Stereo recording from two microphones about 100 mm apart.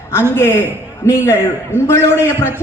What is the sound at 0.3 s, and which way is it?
A man's voice, 25° left (ahead or behind).